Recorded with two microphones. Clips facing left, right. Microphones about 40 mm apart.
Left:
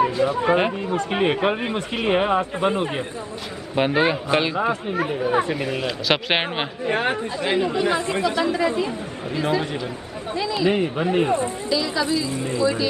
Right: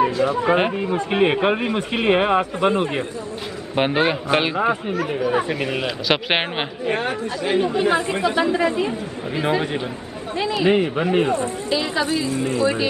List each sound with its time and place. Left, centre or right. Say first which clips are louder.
0.0 s a sound: right 1 dB; centre
0.5 s speech: right 1 dB; centre
0.7 s speech: right 3 dB; centre
2.0 s speech: right 2 dB; centre
5.3 s speech: even; centre
7.0 s speech: left 1 dB; left
7.5 s speech: right 3 dB; centre
10.7 s speech: right 4 dB; centre
11.7 s speech: right 1 dB; right
12.3 s speech: right 3 dB; right